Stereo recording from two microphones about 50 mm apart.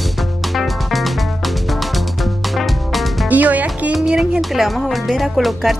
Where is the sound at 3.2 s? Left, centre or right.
Right.